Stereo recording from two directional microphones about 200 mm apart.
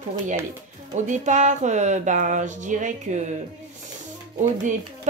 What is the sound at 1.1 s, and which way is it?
Speech, 40° right (ahead or behind).